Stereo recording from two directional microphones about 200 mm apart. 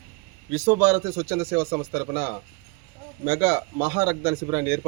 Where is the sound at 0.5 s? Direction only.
15° right (ahead or behind).